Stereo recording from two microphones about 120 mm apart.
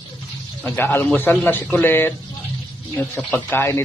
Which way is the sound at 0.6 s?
15° left (ahead or behind).